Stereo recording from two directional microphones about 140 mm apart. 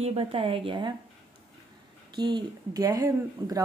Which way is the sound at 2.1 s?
30° right (ahead or behind).